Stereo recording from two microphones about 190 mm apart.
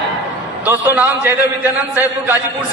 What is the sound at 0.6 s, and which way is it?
Speech, 10° right (ahead or behind).